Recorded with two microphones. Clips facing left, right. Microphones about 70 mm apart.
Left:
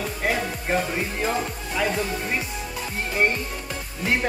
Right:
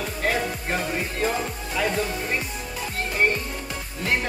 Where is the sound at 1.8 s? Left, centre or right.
Centre.